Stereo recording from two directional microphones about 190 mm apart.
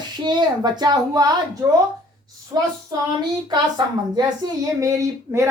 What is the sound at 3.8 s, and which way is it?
A child's voice, 25° right (ahead or behind).